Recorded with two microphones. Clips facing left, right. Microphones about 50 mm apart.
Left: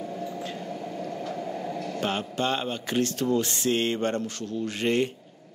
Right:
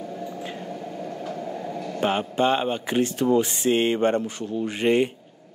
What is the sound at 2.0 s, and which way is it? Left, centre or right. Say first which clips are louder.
Speech: right 7 dB; centre.